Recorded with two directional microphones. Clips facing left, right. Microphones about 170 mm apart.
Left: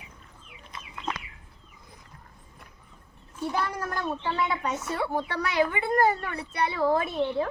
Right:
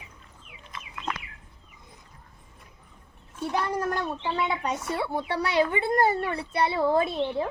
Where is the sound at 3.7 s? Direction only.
25° right (ahead or behind).